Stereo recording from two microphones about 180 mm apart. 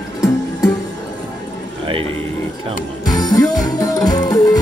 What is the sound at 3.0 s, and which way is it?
Music, 20° left (ahead or behind).